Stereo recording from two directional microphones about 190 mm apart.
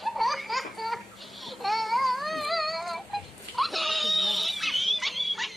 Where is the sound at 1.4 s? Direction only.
Centre (ahead or behind).